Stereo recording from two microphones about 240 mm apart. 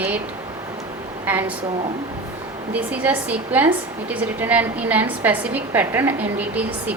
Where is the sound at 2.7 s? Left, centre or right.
Centre.